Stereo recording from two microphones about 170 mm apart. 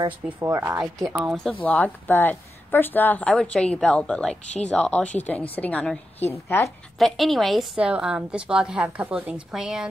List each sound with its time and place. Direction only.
0.5 s speech: 15° right (ahead or behind)
1.1 s a woman's voice: centre (ahead or behind); by 6.7 s 15° left (ahead or behind)
7.0 s a woman's voice: centre (ahead or behind)